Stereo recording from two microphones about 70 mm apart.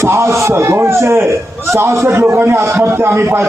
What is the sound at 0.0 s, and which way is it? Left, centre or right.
A man's voice, right.